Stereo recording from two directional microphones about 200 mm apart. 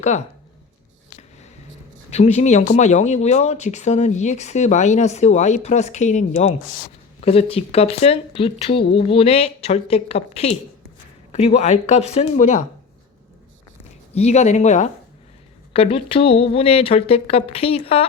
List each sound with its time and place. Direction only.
2.0 s speech: 35° left (ahead or behind)
14.1 s speech: 35° left (ahead or behind)